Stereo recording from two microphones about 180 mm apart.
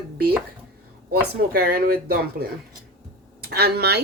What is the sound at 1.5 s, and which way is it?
A woman's voice, 60° right (ahead or behind).